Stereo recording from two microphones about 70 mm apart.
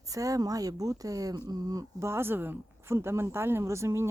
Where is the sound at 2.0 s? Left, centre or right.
Right.